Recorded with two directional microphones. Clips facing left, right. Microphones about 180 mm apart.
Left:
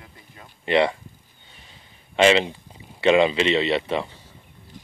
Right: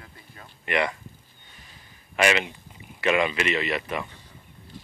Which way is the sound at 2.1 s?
30° left (ahead or behind).